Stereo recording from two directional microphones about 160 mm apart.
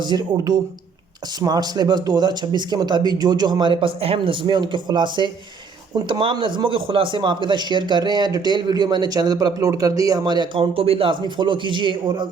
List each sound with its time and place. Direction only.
0.0 s a man's voice: 25° right (ahead or behind)